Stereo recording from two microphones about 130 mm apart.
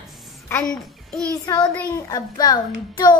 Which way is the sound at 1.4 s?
30° left (ahead or behind).